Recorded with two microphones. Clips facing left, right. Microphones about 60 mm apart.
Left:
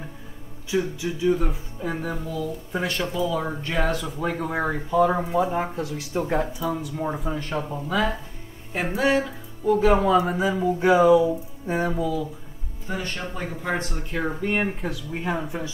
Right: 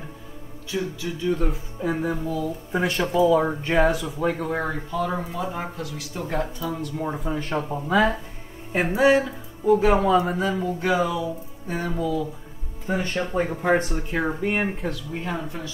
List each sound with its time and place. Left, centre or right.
0.7 s speech: centre
3.9 s speech: centre
4.9 s speech: centre
6.2 s speech: centre
7.7 s speech: centre
10.8 s speech: left
11.9 s speech: centre
12.9 s speech: right
13.8 s speech: centre
15.1 s speech: centre